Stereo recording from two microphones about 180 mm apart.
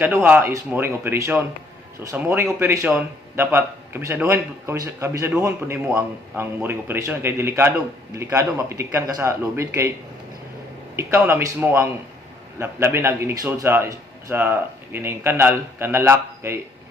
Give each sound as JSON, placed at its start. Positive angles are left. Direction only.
{"t": 0.0, "sound": "a man's voice", "side_deg": -10}
{"t": 10.9, "sound": "a man's voice", "side_deg": -15}